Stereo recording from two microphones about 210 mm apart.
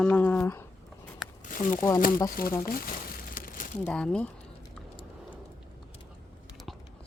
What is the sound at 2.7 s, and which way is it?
Crumpling, 40° left (ahead or behind).